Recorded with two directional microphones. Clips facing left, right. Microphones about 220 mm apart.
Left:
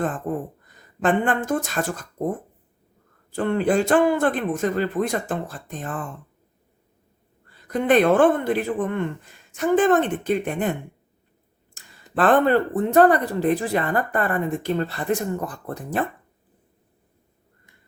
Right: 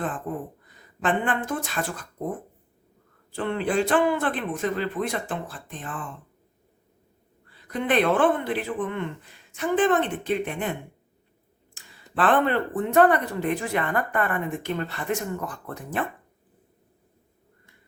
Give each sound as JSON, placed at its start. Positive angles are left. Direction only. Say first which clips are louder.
{"t": 0.6, "sound": "speech", "louder": "left 6 dB", "side_deg": 45}
{"t": 3.3, "sound": "speech", "louder": "left 4 dB", "side_deg": 45}
{"t": 7.5, "sound": "speech", "louder": "left 5 dB", "side_deg": 45}